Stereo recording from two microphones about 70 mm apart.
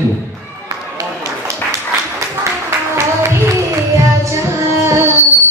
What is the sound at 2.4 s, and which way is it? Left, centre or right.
Music, right.